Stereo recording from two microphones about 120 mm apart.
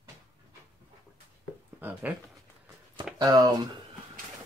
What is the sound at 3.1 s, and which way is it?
Speech, 35° right (ahead or behind).